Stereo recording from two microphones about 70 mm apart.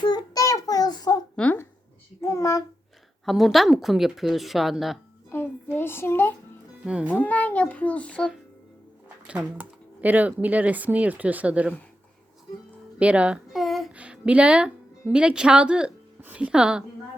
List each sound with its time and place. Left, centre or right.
0.0 s child singing: left
0.4 s child singing: left
1.4 s speech: centre
2.2 s child singing: left
3.2 s speech: centre
5.7 s a child's voice: left
6.8 s a woman's voice: centre
7.1 s a child's voice: left
9.6 s speech: right
13.0 s a woman's voice: centre
13.5 s a sound: centre
13.9 s a woman's voice: centre